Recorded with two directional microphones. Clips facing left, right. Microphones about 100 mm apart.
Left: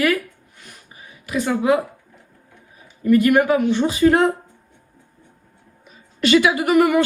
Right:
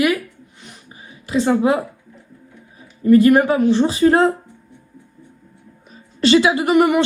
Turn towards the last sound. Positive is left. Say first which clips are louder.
# right 1 dB
turn(degrees=-25)  # may be behind; listen again after turning